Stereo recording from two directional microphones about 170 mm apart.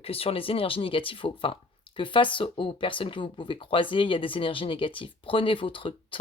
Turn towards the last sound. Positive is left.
turn(degrees=30)  # may be behind; listen again after turning